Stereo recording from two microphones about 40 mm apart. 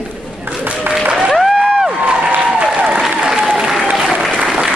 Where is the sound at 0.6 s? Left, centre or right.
Right.